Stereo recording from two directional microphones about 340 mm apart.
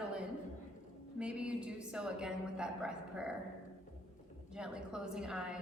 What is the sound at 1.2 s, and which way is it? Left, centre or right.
A woman's voice, centre.